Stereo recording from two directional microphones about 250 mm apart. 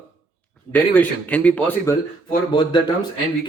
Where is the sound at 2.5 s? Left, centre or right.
Centre.